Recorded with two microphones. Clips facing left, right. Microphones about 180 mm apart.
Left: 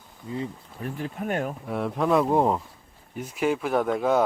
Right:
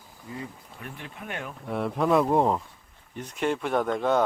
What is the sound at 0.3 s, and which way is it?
Speech, 30° left (ahead or behind).